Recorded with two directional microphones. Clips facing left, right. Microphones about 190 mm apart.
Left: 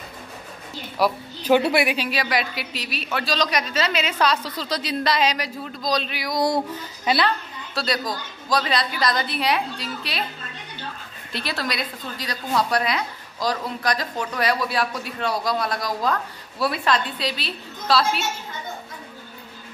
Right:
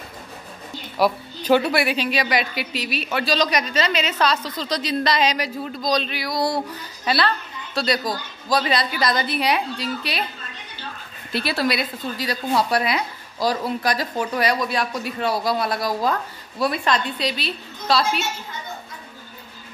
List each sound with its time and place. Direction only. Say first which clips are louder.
0.9 s speech: right 2 dB; centre (ahead or behind)
1.6 s speech: left 1 dB; 20° left (ahead or behind)
2.0 s a woman's voice: right 2 dB; 5° left (ahead or behind)
7.7 s a woman's voice: right 3 dB; centre (ahead or behind)
11.3 s a woman's voice: right 5 dB; 10° right (ahead or behind)